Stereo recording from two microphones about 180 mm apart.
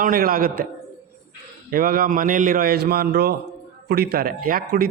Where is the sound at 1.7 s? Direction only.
50° right (ahead or behind).